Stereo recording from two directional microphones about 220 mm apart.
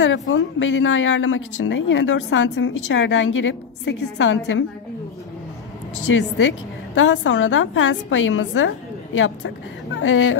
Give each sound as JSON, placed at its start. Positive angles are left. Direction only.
{"t": 0.0, "sound": "a woman's voice", "side_deg": 55}
{"t": 6.1, "sound": "a woman's voice", "side_deg": 60}